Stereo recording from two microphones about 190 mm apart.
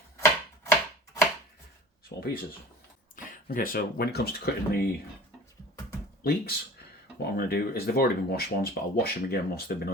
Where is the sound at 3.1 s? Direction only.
45° left (ahead or behind).